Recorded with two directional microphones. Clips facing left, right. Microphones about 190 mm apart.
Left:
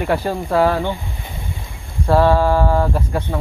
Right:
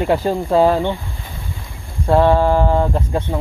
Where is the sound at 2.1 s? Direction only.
20° right (ahead or behind).